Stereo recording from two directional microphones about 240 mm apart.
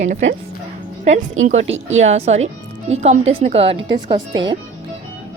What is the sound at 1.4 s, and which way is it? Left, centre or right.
Speech, right.